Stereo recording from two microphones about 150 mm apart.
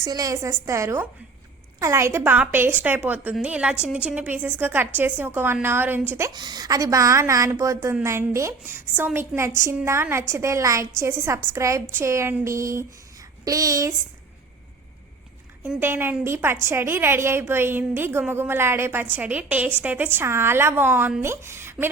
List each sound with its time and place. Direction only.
0.0 s a woman's voice: 25° right (ahead or behind)
15.6 s a woman's voice: 10° right (ahead or behind)